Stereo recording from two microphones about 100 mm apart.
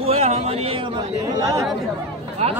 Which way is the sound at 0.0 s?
90° right.